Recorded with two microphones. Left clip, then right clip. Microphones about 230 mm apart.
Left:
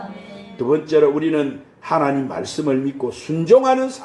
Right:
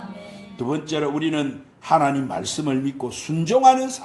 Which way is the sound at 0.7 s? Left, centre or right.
Right.